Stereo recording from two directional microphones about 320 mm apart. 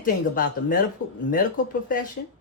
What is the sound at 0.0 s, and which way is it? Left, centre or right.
Speech, left.